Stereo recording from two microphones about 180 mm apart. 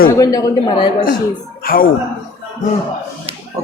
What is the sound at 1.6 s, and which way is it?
Speech, 55° left (ahead or behind).